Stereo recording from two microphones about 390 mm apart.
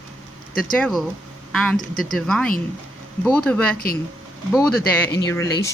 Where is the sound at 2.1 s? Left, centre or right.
Centre.